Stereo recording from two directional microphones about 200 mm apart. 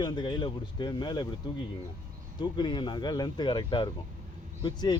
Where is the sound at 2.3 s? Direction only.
20° left (ahead or behind).